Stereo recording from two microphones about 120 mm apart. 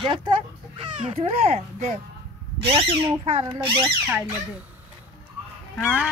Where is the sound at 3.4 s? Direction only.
45° right (ahead or behind).